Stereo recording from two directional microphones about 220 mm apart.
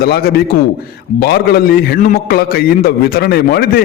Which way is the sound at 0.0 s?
45° left (ahead or behind).